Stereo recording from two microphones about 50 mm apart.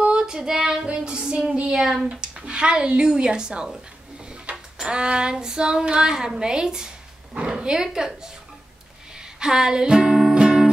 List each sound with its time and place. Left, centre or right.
0.0 s child singing: centre
0.8 s a sound: right
2.2 s speech: centre
4.7 s speech: centre
9.4 s speech: centre
10.3 s music: centre